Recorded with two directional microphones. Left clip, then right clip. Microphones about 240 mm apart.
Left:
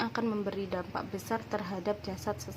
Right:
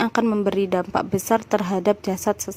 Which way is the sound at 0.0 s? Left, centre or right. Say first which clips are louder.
Right 12 dB; right.